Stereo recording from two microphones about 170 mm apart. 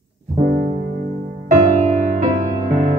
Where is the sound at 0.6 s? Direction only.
50° right (ahead or behind).